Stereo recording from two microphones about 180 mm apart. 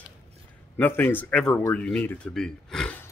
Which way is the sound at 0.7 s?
10° left (ahead or behind).